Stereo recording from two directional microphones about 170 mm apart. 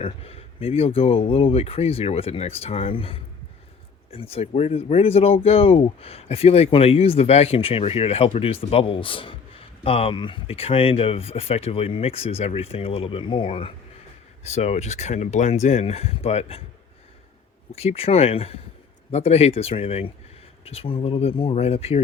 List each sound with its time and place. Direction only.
0.0 s speech: 35° left (ahead or behind)
17.7 s speech: 35° left (ahead or behind)